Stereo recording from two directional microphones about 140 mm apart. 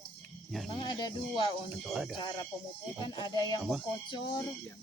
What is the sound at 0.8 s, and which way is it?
Speech, 35° left (ahead or behind).